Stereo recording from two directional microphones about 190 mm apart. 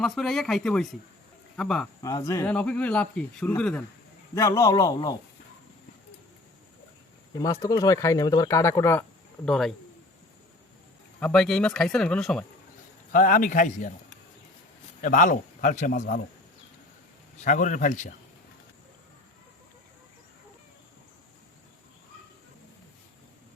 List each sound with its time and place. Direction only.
0.0 s speech: centre (ahead or behind)
2.0 s a man's voice: 15° left (ahead or behind)
7.3 s speech: 20° left (ahead or behind)
9.5 s speech: centre (ahead or behind)
11.2 s speech: 5° left (ahead or behind)
13.1 s a man's voice: 45° left (ahead or behind)
15.0 s a man's voice: 45° left (ahead or behind)
17.4 s a man's voice: 40° left (ahead or behind)